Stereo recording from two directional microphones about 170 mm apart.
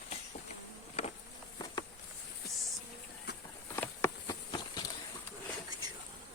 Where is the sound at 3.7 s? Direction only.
15° left (ahead or behind).